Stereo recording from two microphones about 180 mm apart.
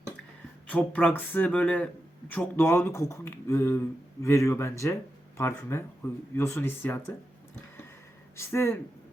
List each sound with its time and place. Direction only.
0.7 s speech: 5° left (ahead or behind)
8.4 s speech: 15° left (ahead or behind)